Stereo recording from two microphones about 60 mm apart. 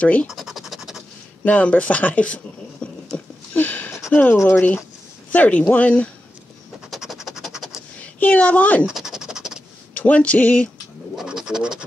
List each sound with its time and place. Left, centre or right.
0.0 s speech: left
0.3 s scratch: centre
1.4 s speech: left
3.5 s a sound: left
4.1 s speech: left
6.9 s scratch: centre
8.0 s a woman's voice: left
8.9 s scratch: centre
9.9 s speech: left
11.2 s scratch: centre